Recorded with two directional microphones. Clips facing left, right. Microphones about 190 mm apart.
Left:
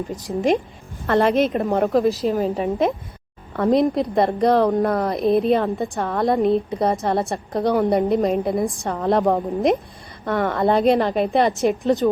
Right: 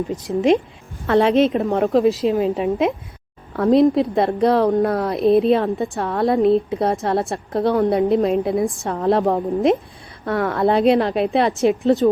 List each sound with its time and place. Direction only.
1.0 s a woman's voice: centre (ahead or behind)